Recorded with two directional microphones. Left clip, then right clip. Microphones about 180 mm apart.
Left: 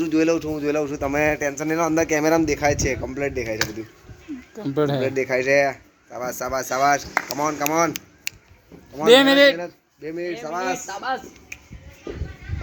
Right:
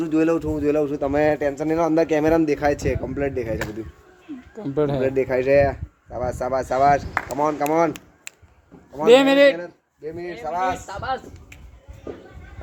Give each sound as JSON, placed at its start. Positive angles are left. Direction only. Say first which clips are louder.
{"t": 0.0, "sound": "speech", "louder": "even", "side_deg": -55}
{"t": 4.5, "sound": "speech", "louder": "even", "side_deg": 0}
{"t": 5.1, "sound": "speech", "louder": "right 2 dB", "side_deg": -45}
{"t": 9.0, "sound": "speech", "louder": "even", "side_deg": 0}
{"t": 9.6, "sound": "a man's voice", "louder": "left 2 dB", "side_deg": 35}